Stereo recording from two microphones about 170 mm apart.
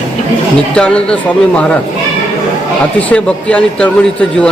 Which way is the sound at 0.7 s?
5° left (ahead or behind).